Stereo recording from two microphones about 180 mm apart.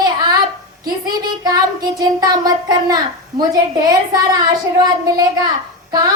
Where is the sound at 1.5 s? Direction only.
20° right (ahead or behind).